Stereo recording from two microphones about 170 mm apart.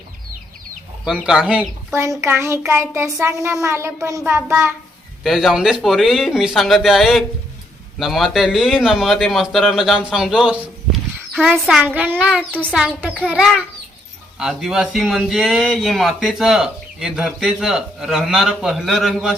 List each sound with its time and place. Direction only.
1.0 s a child's voice: 5° right (ahead or behind)
5.2 s a man's voice: 5° right (ahead or behind)
11.6 s a child's voice: 5° right (ahead or behind)